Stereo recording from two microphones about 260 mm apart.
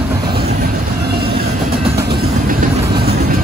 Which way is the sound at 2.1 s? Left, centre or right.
Right.